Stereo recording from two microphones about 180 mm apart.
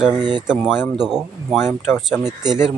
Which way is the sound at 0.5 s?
10° left (ahead or behind).